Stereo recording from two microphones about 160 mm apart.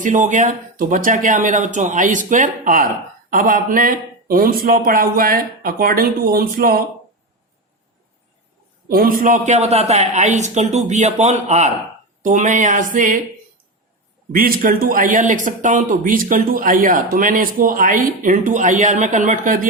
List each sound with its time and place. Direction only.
0.0 s speech: 50° right (ahead or behind)
8.9 s speech: 65° right (ahead or behind)
14.3 s speech: 60° right (ahead or behind)